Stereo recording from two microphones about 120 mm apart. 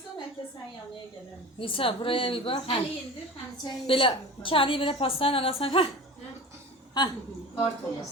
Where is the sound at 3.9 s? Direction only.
45° left (ahead or behind).